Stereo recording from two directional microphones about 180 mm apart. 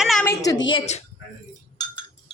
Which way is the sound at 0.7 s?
35° left (ahead or behind).